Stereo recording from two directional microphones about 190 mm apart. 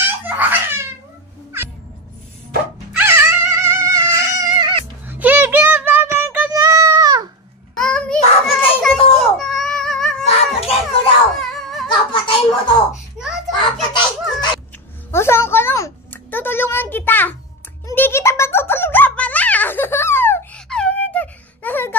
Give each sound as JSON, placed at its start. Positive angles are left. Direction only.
{"t": 0.0, "sound": "babbling", "side_deg": -10}
{"t": 3.0, "sound": "dog", "side_deg": -15}
{"t": 5.0, "sound": "music", "side_deg": -10}
{"t": 7.7, "sound": "child singing", "side_deg": 5}
{"t": 9.2, "sound": "baby cry", "side_deg": 0}
{"t": 10.2, "sound": "baby cry", "side_deg": 30}
{"t": 11.3, "sound": "a sound", "side_deg": 0}
{"t": 12.1, "sound": "a sound", "side_deg": 25}
{"t": 13.2, "sound": "children playing", "side_deg": -5}
{"t": 15.0, "sound": "a sound", "side_deg": 15}
{"t": 17.8, "sound": "music", "side_deg": 10}